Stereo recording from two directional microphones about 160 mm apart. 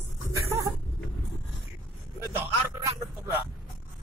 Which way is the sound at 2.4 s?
15° right (ahead or behind).